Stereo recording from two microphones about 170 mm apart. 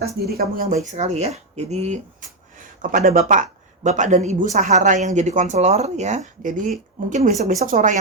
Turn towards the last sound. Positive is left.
turn(degrees=-50)  # may be behind; listen again after turning